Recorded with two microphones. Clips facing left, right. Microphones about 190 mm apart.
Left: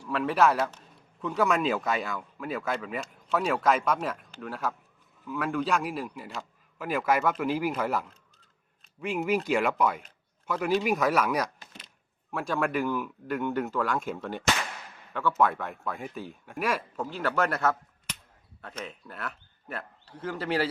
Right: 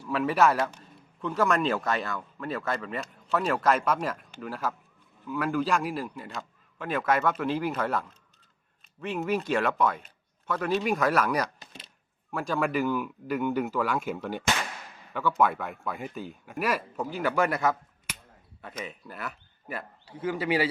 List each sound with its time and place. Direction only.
0.0 s speech: 5° right (ahead or behind)